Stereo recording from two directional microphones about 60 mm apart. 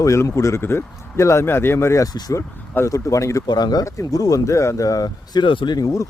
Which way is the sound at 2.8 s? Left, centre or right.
Left.